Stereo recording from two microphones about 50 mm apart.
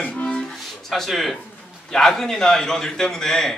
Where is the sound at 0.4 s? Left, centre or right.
Centre.